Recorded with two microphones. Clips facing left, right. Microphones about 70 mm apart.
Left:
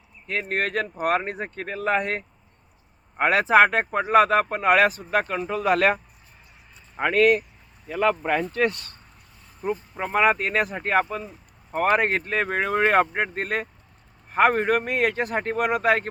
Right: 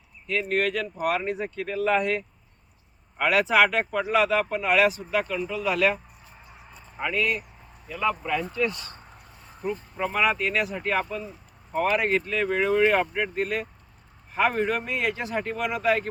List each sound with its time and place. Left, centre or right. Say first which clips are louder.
0.3 s speech: right 1 dB; left
6.9 s speech: left 8 dB; left
9.6 s speech: left 1 dB; left